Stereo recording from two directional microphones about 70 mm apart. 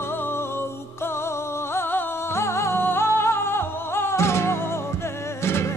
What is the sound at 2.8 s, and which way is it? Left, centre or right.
Flamenco, left.